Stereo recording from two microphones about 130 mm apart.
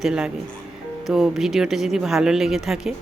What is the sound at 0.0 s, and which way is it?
Speech, 5° right (ahead or behind).